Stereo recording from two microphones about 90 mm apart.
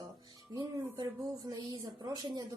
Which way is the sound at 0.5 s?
55° right (ahead or behind).